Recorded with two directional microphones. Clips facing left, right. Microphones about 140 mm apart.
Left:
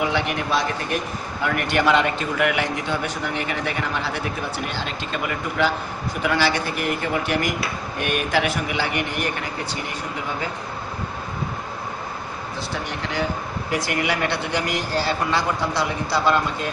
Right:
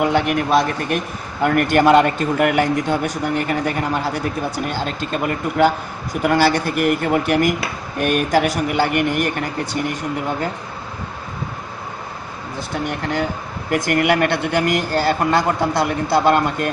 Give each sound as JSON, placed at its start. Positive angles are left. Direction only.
{"t": 0.0, "sound": "a man's voice", "side_deg": -50}
{"t": 12.5, "sound": "a man's voice", "side_deg": -50}